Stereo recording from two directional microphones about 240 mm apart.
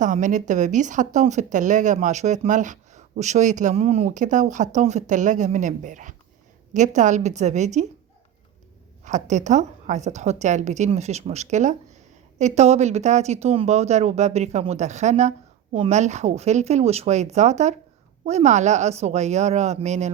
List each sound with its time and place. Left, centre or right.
0.0 s speech: right
9.0 s speech: right